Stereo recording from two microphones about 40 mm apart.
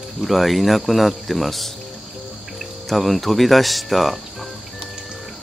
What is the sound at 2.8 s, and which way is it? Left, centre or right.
Speech, centre.